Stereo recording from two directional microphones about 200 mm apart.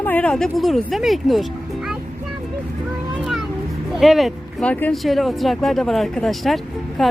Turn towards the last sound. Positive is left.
turn(degrees=0)  # may be behind; listen again after turning